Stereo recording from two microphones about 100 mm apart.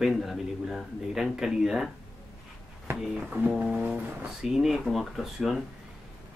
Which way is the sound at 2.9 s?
5° right (ahead or behind).